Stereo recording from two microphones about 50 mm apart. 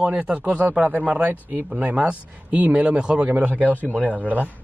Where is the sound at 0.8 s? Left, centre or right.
Right; by 3.3 s centre.